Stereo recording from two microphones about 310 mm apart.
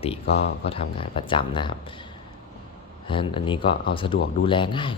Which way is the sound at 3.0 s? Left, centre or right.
Centre.